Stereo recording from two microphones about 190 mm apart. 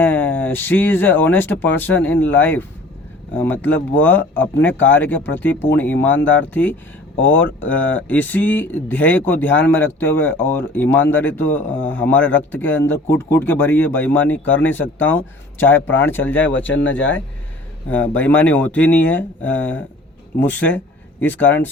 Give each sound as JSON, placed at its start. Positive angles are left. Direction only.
{"t": 0.0, "sound": "speech", "side_deg": 10}
{"t": 16.6, "sound": "speech", "side_deg": 75}
{"t": 18.1, "sound": "speech", "side_deg": 10}